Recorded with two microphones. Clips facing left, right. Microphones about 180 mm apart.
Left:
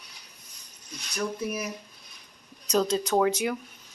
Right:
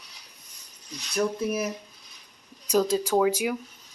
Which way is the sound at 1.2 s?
25° right (ahead or behind).